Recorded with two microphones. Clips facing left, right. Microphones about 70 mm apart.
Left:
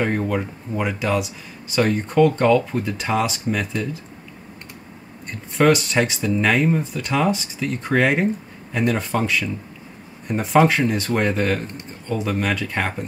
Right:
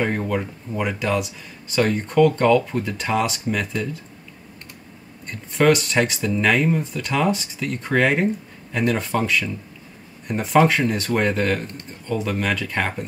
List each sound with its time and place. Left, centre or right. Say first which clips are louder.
0.0 s speech: left 1 dB; centre
5.3 s speech: even; centre